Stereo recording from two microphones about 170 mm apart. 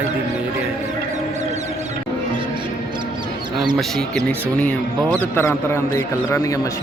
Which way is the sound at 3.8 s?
Centre (ahead or behind).